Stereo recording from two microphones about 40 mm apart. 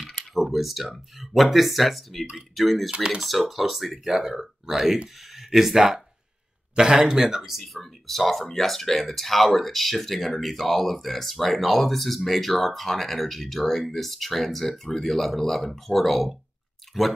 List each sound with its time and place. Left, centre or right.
0.3 s typing: centre
0.8 s speech: centre
2.9 s speech: right
3.2 s speech: centre